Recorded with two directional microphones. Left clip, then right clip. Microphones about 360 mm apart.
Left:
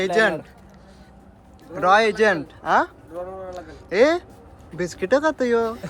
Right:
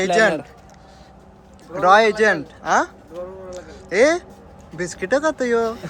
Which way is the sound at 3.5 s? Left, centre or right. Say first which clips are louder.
Right 1 dB; centre.